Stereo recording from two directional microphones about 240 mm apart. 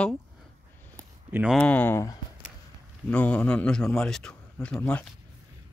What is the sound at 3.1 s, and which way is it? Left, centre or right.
A man's voice, centre.